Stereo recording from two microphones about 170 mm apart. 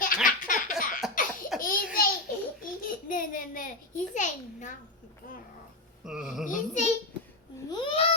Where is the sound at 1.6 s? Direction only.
55° left (ahead or behind).